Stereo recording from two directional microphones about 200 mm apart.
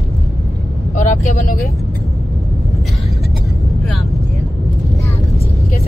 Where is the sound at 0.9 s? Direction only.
40° left (ahead or behind).